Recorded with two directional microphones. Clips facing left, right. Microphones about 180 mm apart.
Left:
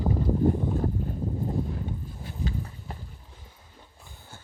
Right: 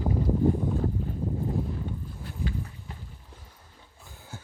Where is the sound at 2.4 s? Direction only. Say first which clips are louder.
Left 1 dB; 30° left (ahead or behind).